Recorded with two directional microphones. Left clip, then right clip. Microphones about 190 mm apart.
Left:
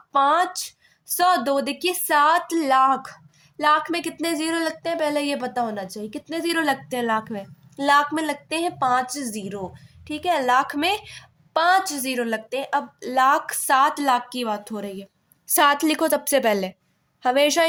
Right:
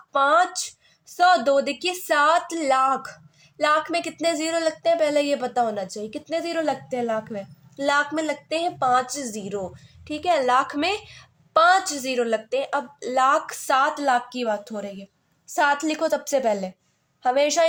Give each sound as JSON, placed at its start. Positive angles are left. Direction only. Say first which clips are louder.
{"t": 0.1, "sound": "speech", "louder": "even", "side_deg": 10}
{"t": 15.4, "sound": "a woman's voice", "louder": "left 3 dB", "side_deg": 30}